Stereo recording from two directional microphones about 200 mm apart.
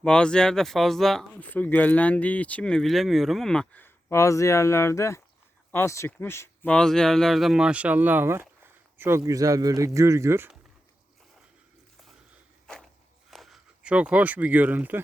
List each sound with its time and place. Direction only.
0.0 s speech: 5° left (ahead or behind); by 10.6 s 10° right (ahead or behind)
12.6 s a sound: 5° left (ahead or behind)
13.3 s speech: centre (ahead or behind)